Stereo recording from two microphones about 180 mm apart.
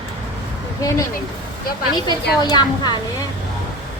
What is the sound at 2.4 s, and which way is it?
Speech, 25° left (ahead or behind).